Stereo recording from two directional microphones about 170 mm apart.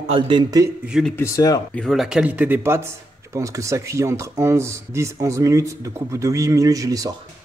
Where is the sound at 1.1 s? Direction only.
15° left (ahead or behind).